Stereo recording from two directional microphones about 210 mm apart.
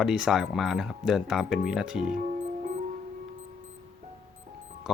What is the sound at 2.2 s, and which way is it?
Music, 40° right (ahead or behind).